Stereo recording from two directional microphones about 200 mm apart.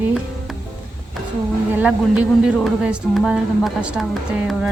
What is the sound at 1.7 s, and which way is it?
Speech, 5° right (ahead or behind).